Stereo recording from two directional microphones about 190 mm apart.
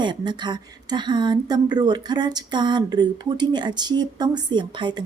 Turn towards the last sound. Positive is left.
turn(degrees=-25)  # may be behind; listen again after turning